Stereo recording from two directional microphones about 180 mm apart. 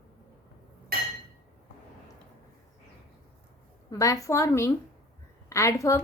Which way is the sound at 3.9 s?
20° left (ahead or behind).